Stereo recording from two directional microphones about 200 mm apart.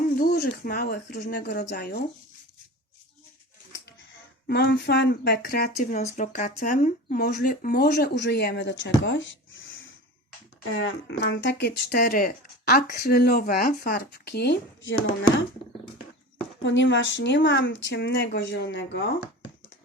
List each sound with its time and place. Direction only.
0.2 s speech: 50° left (ahead or behind)
4.4 s speech: 55° left (ahead or behind); by 9.9 s 75° left (ahead or behind)
10.6 s speech: 85° left
11.2 s speech: 60° left (ahead or behind)
16.6 s speech: 65° left (ahead or behind)